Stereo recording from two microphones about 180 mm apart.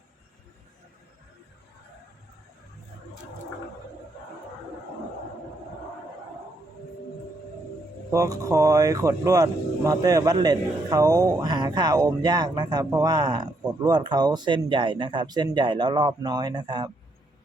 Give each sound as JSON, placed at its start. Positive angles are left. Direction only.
{"t": 8.1, "sound": "speech", "side_deg": -20}